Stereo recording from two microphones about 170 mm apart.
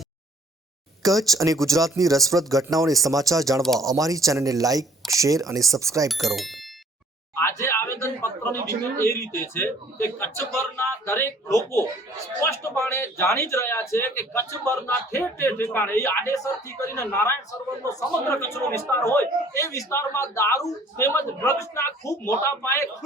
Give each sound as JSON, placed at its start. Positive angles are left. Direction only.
{"t": 1.0, "sound": "speech", "side_deg": -20}
{"t": 6.1, "sound": "speech", "side_deg": 0}
{"t": 7.3, "sound": "a sound", "side_deg": 15}
{"t": 8.8, "sound": "speech", "side_deg": 15}